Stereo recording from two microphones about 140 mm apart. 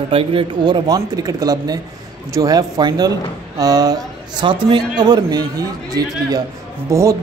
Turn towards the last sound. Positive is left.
turn(degrees=-20)  # may be behind; listen again after turning